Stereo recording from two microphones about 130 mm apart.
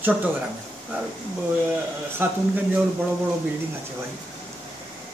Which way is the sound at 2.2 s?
15° right (ahead or behind).